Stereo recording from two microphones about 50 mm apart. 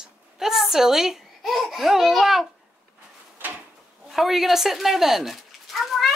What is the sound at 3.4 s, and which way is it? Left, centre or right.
Drawer open or close, right.